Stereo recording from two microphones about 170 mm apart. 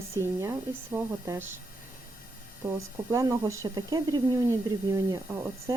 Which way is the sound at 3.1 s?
20° right (ahead or behind).